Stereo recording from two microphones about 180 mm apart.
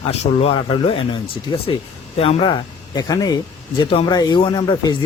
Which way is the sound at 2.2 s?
30° left (ahead or behind).